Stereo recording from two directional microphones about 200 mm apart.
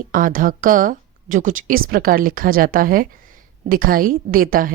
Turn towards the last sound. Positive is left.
turn(degrees=-45)  # may be behind; listen again after turning